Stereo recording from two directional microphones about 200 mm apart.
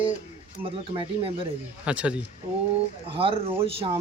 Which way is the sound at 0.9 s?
25° right (ahead or behind).